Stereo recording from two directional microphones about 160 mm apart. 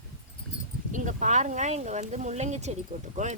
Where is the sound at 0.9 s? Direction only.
55° right (ahead or behind).